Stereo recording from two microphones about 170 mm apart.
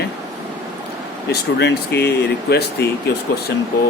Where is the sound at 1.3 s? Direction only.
80° left.